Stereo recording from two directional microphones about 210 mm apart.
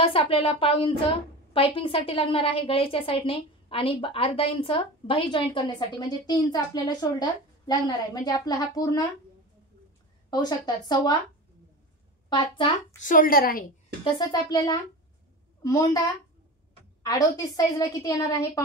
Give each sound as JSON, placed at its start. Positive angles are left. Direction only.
{"t": 0.0, "sound": "a woman's voice", "side_deg": 25}
{"t": 10.3, "sound": "a woman's voice", "side_deg": 20}
{"t": 13.0, "sound": "a woman's voice", "side_deg": 40}
{"t": 14.1, "sound": "a woman's voice", "side_deg": 20}
{"t": 17.0, "sound": "a woman's voice", "side_deg": 15}